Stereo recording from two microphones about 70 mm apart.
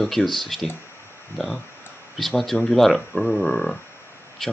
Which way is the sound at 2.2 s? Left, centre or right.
Centre.